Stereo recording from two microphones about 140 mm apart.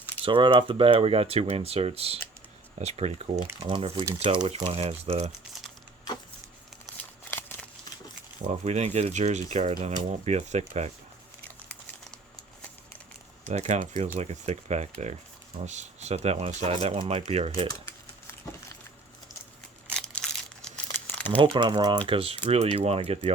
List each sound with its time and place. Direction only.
0.2 s speech: 40° right (ahead or behind)
7.3 s a sound: 15° left (ahead or behind)
8.4 s speech: 55° right (ahead or behind)
13.5 s speech: 55° right (ahead or behind)
19.9 s a sound: 5° left (ahead or behind)
20.8 s crumpling: 15° left (ahead or behind)
21.4 s speech: 35° right (ahead or behind)
22.0 s speech: 40° right (ahead or behind)